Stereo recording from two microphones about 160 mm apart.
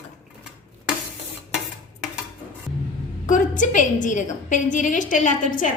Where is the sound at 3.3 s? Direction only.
55° left (ahead or behind).